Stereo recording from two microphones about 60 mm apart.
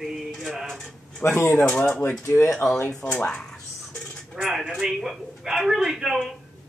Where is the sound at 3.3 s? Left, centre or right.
Centre.